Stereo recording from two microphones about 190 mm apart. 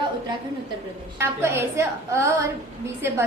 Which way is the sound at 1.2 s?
15° right (ahead or behind).